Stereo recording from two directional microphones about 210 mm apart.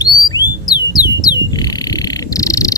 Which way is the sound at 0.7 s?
20° left (ahead or behind).